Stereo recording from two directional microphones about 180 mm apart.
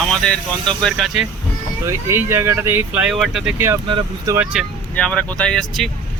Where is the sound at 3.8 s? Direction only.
30° right (ahead or behind).